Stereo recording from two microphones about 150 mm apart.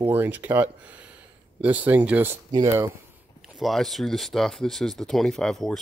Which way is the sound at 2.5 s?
25° right (ahead or behind).